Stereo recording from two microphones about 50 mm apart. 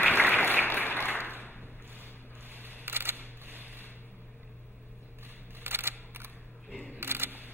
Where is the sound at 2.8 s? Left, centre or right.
Right.